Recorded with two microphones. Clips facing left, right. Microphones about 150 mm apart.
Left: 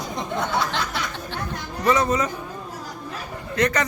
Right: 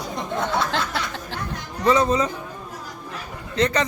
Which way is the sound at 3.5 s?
25° right (ahead or behind).